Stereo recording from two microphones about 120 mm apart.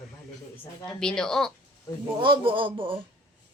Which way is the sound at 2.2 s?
45° right (ahead or behind).